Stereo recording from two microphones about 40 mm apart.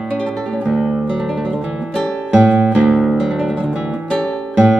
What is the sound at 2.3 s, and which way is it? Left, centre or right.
Music, right.